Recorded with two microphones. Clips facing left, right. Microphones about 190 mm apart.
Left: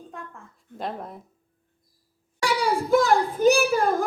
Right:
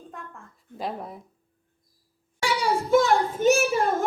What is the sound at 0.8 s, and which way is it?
Speech, centre (ahead or behind).